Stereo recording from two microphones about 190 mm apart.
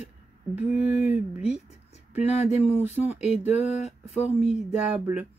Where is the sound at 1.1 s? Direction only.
5° right (ahead or behind).